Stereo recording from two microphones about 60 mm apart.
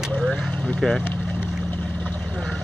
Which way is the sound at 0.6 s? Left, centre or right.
Centre.